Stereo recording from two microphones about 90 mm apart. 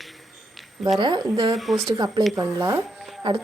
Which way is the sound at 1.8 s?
45° right (ahead or behind).